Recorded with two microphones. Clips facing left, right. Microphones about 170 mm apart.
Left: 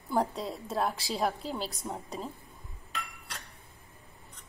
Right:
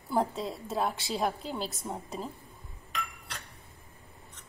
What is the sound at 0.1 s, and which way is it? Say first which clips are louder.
A woman's voice: even; centre (ahead or behind).